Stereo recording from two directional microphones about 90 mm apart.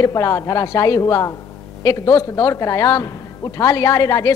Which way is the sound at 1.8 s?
40° left (ahead or behind).